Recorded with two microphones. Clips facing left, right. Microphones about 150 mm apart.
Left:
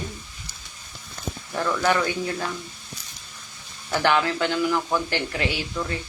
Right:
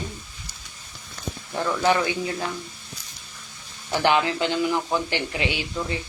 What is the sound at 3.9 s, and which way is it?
Speech, 15° right (ahead or behind).